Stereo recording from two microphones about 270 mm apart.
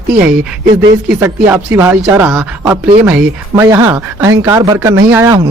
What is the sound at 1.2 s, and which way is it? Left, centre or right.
Speech, centre.